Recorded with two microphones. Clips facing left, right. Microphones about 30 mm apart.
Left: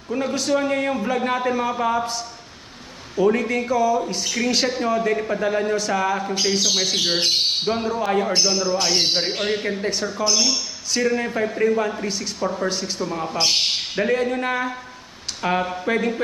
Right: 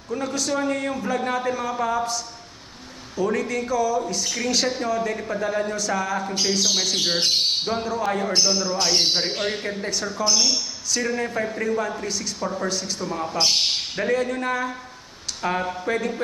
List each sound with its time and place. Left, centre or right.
0.1 s a man's voice: left
3.2 s a man's voice: left
11.1 s a man's voice: left
12.6 s a man's voice: centre